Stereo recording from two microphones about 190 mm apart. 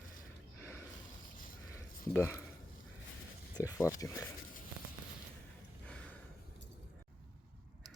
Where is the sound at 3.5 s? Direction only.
20° left (ahead or behind).